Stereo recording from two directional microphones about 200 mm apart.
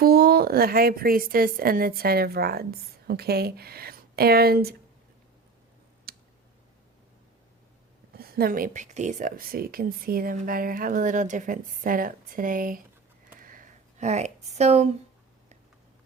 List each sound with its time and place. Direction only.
0.0 s speech: 50° right (ahead or behind)
6.1 s clicking: 50° right (ahead or behind)
8.1 s speech: 50° right (ahead or behind)
13.4 s a sound: 45° right (ahead or behind)